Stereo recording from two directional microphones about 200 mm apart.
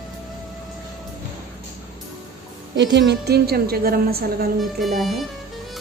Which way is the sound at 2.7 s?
65° right (ahead or behind).